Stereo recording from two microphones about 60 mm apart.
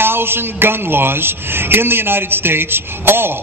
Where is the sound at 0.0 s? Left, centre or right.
Right.